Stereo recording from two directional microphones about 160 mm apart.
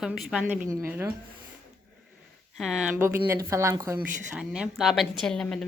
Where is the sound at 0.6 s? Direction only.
20° right (ahead or behind).